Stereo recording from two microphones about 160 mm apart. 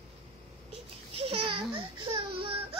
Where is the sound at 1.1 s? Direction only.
35° right (ahead or behind).